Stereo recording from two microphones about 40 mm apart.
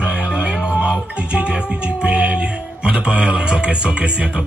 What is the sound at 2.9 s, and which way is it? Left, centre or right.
Music, right.